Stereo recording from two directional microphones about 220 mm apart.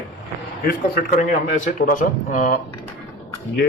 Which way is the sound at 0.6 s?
45° left (ahead or behind).